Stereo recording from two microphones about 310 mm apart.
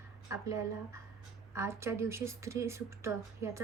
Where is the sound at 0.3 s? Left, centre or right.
Centre.